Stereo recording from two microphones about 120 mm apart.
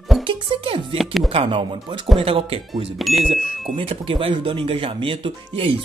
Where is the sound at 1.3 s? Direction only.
50° right (ahead or behind).